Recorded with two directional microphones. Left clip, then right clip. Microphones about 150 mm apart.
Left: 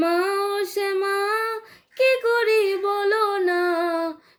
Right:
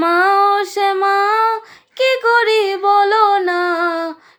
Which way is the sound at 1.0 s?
45° right (ahead or behind).